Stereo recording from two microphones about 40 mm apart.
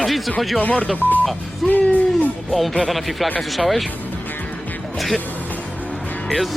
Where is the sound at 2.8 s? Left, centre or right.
Centre.